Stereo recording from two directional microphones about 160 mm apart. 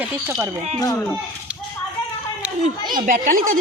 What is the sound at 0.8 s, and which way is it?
Speech, 20° left (ahead or behind).